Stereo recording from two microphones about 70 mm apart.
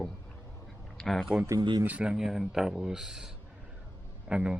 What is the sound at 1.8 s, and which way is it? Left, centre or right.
Speech, centre.